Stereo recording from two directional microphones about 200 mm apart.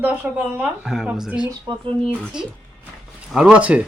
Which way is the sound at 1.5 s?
20° right (ahead or behind).